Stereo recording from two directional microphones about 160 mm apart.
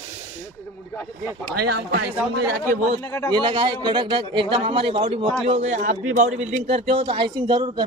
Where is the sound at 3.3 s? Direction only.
30° right (ahead or behind); by 6.5 s 50° right (ahead or behind).